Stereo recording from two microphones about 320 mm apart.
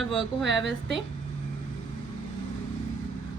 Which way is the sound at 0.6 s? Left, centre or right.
Right.